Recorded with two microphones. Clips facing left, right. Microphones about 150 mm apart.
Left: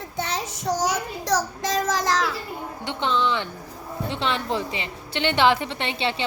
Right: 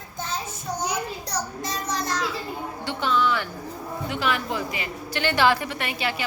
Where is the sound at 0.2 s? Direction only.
80° left.